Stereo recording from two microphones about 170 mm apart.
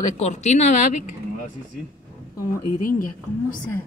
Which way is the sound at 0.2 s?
40° left (ahead or behind).